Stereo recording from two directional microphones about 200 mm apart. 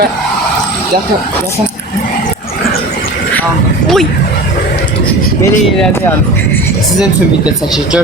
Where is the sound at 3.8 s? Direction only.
Centre (ahead or behind).